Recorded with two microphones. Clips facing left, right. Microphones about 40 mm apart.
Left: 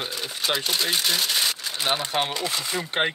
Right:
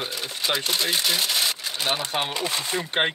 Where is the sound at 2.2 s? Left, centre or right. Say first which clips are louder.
Even; right.